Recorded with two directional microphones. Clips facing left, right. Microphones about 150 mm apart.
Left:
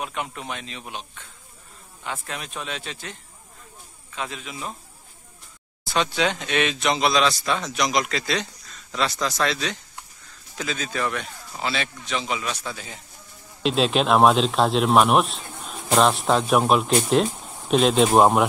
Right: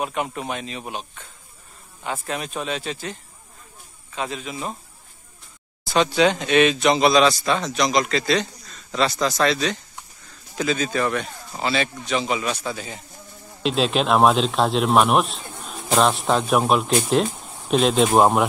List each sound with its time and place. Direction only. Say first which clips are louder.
0.0 s speech: right 5 dB; 45° right (ahead or behind)
2.2 s speech: right 6 dB; 5° right (ahead or behind)
4.2 s speech: right 4 dB; centre (ahead or behind)
4.5 s speech: right 4 dB; 35° right (ahead or behind)
5.9 s speech: right 5 dB; centre (ahead or behind)